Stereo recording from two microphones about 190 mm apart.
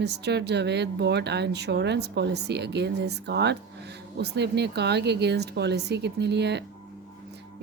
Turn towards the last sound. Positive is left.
turn(degrees=-60)  # may be behind; listen again after turning